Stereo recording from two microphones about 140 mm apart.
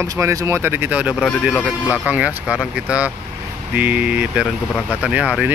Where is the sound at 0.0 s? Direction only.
20° right (ahead or behind).